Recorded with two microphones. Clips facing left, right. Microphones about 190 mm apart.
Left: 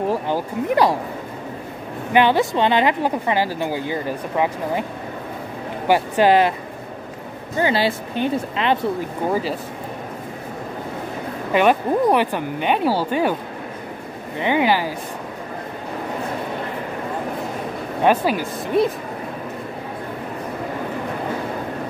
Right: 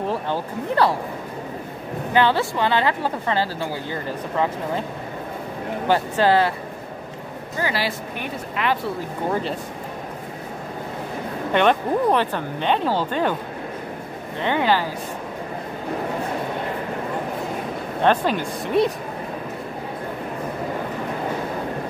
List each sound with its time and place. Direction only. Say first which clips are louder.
0.1 s speech: left 3 dB; 15° left (ahead or behind)
2.1 s speech: left 3 dB; 15° left (ahead or behind)
5.9 s speech: left 3 dB; 15° left (ahead or behind)
7.5 s speech: left 6 dB; 25° left (ahead or behind)
9.3 s speech: left 2 dB; 5° left (ahead or behind)
11.5 s speech: left 2 dB; 10° left (ahead or behind)
14.4 s speech: left 2 dB; 10° left (ahead or behind)
18.0 s speech: left 2 dB; 10° left (ahead or behind)